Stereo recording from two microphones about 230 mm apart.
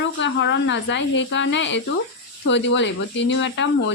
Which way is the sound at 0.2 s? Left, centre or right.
Left.